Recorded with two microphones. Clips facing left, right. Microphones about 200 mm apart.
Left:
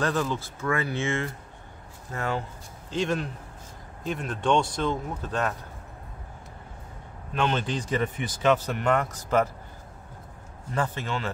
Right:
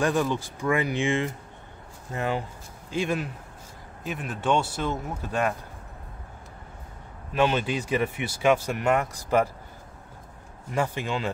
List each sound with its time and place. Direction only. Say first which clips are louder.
0.0 s speech: right 2 dB; 15° right (ahead or behind)
7.3 s speech: right 3 dB; 10° right (ahead or behind)
10.7 s speech: right 2 dB; 10° right (ahead or behind)